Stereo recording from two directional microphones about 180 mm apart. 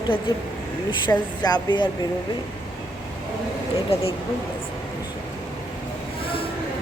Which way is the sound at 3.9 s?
35° left (ahead or behind).